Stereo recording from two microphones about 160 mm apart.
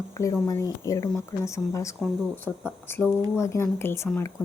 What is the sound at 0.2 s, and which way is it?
A woman's voice, 20° left (ahead or behind).